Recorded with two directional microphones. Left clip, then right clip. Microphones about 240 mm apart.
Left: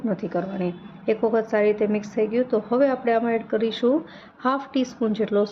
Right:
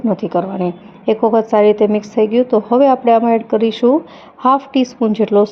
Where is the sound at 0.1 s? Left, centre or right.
Right.